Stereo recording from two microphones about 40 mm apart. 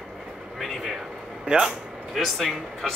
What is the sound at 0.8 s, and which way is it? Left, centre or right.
Speech, centre.